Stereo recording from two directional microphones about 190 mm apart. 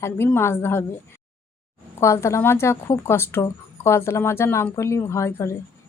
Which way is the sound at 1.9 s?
15° left (ahead or behind).